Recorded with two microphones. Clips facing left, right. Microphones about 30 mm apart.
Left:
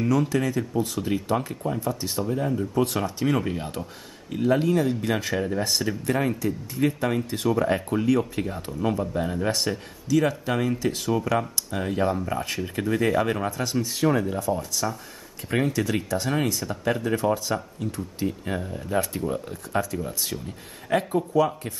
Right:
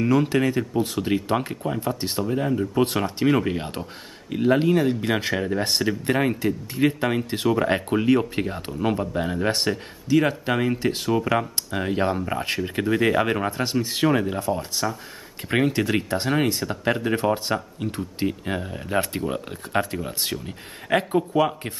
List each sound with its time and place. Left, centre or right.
0.1 s speech: right